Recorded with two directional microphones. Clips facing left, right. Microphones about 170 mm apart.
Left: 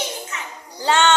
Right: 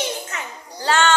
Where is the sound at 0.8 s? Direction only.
20° left (ahead or behind).